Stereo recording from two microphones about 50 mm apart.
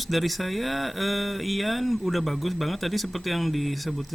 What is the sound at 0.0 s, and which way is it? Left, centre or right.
Speech, centre.